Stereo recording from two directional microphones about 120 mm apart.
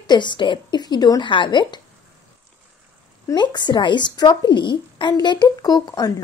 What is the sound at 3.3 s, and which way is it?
Speech, 40° left (ahead or behind).